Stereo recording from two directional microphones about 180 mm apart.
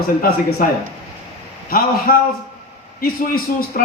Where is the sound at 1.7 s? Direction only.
55° left (ahead or behind).